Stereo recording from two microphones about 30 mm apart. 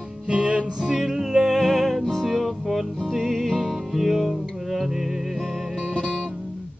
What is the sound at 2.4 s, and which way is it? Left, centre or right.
Music, centre.